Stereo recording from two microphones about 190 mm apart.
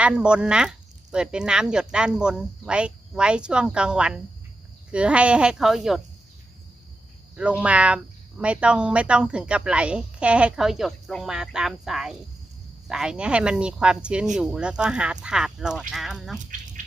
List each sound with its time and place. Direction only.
0.0 s speech: 5° right (ahead or behind)
7.3 s speech: 5° right (ahead or behind)
16.4 s a sound: 45° right (ahead or behind)